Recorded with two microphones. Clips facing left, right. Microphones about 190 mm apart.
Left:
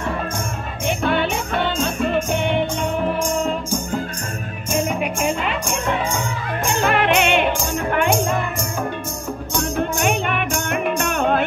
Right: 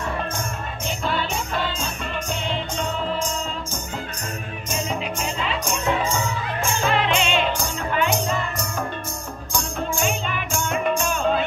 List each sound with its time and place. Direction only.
0.8 s music: 65° left (ahead or behind)
4.6 s music: 10° left (ahead or behind)
5.0 s music: 60° left (ahead or behind)
6.7 s music: 60° left (ahead or behind)
9.6 s music: 65° left (ahead or behind)